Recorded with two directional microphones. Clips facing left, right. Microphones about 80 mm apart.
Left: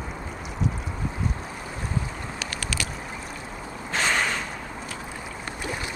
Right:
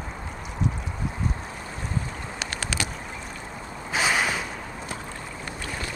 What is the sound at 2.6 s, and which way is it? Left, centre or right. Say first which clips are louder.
Vehicle: right 2 dB; right.